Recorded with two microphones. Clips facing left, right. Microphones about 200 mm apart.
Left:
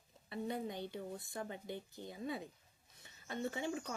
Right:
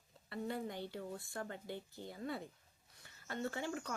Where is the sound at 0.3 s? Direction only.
20° left (ahead or behind).